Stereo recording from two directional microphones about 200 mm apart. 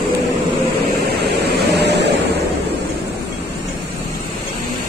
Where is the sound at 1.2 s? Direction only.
55° right (ahead or behind).